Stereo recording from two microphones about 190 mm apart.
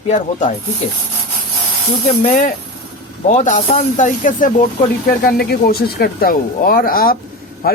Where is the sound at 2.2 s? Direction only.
40° left (ahead or behind).